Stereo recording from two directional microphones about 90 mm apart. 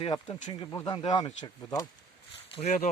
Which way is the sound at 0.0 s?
60° left (ahead or behind).